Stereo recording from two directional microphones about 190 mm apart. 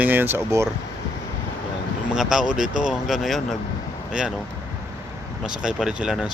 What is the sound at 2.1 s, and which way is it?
Speech, 5° right (ahead or behind).